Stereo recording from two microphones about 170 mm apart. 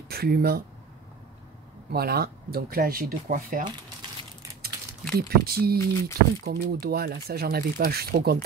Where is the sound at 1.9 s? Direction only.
65° right (ahead or behind).